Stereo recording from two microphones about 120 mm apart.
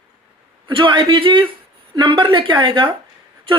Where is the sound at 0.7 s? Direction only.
45° right (ahead or behind).